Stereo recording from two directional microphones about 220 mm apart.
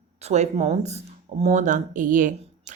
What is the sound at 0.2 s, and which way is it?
Speech, 30° right (ahead or behind).